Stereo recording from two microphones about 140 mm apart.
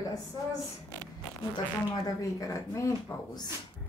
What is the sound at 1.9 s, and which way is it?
Speech, 25° left (ahead or behind).